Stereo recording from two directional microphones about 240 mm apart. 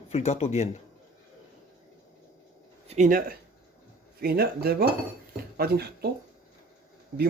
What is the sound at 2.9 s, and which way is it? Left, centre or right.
Speech, right.